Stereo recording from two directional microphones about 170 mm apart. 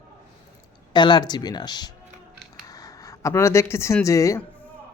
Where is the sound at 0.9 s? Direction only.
25° left (ahead or behind).